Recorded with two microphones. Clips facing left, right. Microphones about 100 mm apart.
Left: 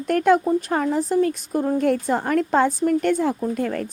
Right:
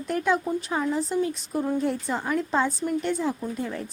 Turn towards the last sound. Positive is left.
turn(degrees=60)  # may be behind; listen again after turning